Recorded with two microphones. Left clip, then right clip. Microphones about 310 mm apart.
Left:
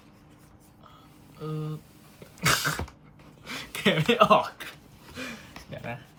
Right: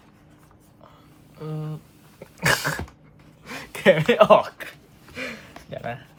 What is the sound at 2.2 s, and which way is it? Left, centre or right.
Cough, centre.